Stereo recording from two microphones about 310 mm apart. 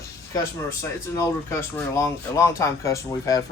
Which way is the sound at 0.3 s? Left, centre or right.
Centre.